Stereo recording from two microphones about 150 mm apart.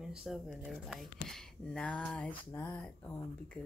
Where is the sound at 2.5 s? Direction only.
20° left (ahead or behind).